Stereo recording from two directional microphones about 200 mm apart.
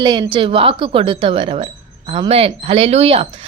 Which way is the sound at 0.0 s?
20° right (ahead or behind).